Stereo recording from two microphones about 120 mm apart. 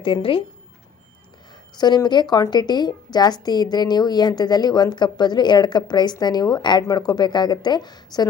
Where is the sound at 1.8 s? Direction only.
35° left (ahead or behind).